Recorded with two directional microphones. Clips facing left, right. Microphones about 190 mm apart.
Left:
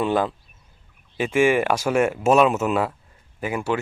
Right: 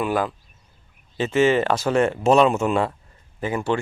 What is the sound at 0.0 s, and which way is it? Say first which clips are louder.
Speech: left 1 dB; 25° left (ahead or behind).